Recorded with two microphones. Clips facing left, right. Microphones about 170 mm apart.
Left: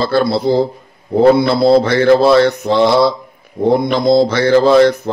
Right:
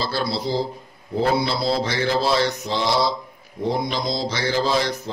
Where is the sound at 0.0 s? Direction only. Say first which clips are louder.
Left 11 dB; 55° left (ahead or behind).